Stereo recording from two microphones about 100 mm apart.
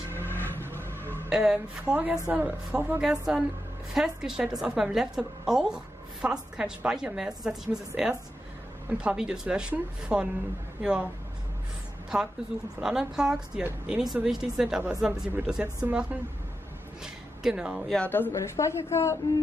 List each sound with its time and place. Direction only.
0.3 s vehicle: 20° left (ahead or behind)
1.3 s a woman's voice: 5° right (ahead or behind)
3.0 s a woman's voice: 5° right (ahead or behind)
12.8 s a woman's voice: 5° right (ahead or behind)
17.8 s speech: 10° left (ahead or behind)
18.1 s a woman's voice: 25° left (ahead or behind)